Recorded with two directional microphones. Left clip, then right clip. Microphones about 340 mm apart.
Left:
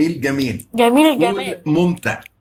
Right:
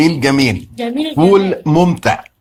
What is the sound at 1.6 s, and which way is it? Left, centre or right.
Speech, right.